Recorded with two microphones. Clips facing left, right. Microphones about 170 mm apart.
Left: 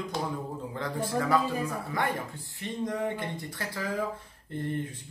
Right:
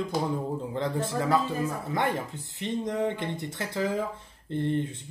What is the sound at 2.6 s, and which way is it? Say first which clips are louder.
Speech: right 3 dB; 25° right (ahead or behind).